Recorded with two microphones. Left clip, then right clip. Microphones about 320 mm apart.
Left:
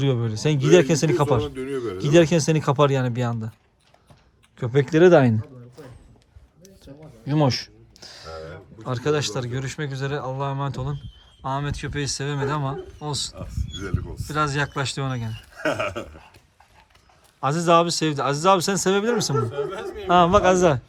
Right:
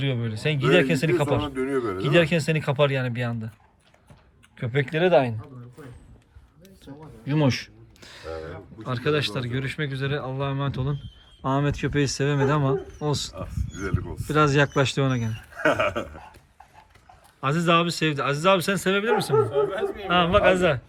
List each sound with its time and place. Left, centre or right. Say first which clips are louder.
0.0 s a man's voice: left 4 dB; centre
1.5 s a man's voice: right 2 dB; centre
2.0 s a man's voice: left 5 dB; centre
4.6 s a man's voice: left 7 dB; centre
6.6 s a sound: even; centre
8.8 s speech: left 1 dB; centre
17.4 s speech: left 3 dB; centre